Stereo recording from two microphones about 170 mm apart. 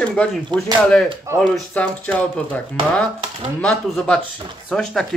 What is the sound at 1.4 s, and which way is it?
Speech, 5° left (ahead or behind).